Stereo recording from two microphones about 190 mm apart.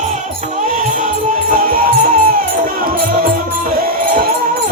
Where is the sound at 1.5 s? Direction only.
50° right (ahead or behind).